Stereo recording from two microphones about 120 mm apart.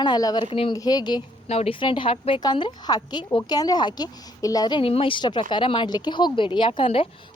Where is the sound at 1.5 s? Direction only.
60° left (ahead or behind).